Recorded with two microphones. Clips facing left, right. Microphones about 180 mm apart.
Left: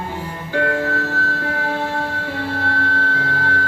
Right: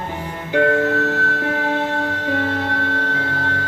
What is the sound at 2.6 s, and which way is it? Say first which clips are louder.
Music: even; 20° right (ahead or behind).